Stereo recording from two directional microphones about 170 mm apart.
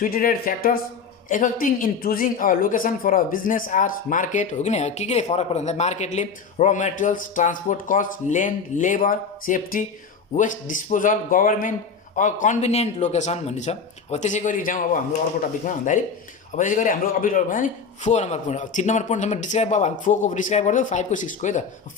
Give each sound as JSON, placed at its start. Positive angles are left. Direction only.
{"t": 0.0, "sound": "a woman's voice", "side_deg": 55}
{"t": 16.6, "sound": "a woman's voice", "side_deg": 50}